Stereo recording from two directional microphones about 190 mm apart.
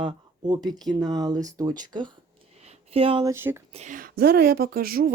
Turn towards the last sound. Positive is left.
turn(degrees=-50)  # may be behind; listen again after turning